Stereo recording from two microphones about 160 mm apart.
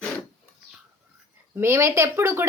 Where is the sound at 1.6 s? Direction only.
15° right (ahead or behind).